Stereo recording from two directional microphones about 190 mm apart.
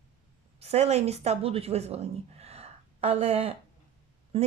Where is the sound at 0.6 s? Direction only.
35° right (ahead or behind).